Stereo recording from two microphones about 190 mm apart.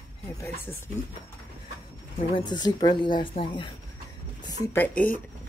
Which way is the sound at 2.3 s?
20° left (ahead or behind).